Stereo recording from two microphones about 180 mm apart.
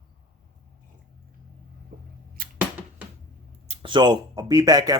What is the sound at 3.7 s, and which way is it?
Speech, 25° right (ahead or behind).